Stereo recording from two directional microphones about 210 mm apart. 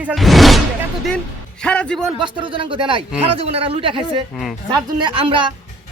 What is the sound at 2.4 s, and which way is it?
Speech, 25° right (ahead or behind).